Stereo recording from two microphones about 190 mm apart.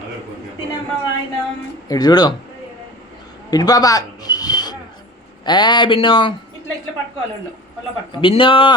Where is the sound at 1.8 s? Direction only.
20° left (ahead or behind).